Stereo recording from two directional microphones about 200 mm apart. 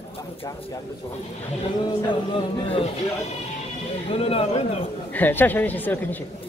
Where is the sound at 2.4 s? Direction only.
30° left (ahead or behind).